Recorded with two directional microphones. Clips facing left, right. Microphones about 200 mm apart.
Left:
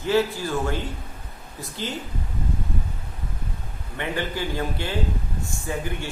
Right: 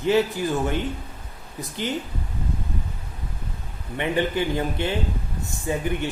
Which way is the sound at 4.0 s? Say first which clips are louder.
Right 5 dB; 20° right (ahead or behind).